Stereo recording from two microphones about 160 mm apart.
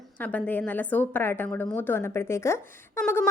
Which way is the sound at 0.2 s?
10° left (ahead or behind).